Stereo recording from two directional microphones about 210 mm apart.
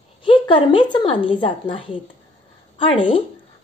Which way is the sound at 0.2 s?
25° left (ahead or behind).